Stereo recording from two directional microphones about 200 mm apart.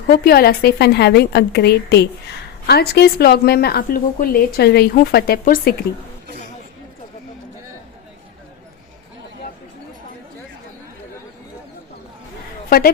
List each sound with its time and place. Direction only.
0.1 s a woman's voice: 50° left (ahead or behind)